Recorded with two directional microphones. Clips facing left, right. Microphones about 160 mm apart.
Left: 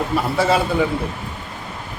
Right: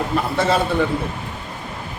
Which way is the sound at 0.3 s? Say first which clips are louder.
Left 1 dB; 5° left (ahead or behind).